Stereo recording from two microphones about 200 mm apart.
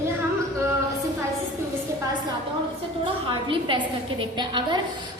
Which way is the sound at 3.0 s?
25° right (ahead or behind).